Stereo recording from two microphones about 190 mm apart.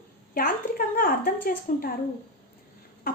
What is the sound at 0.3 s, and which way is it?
A woman's voice, 50° left (ahead or behind).